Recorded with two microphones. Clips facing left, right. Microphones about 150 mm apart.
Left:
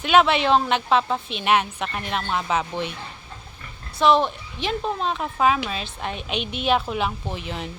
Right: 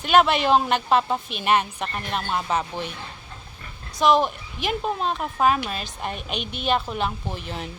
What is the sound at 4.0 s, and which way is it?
A woman's voice, 5° right (ahead or behind).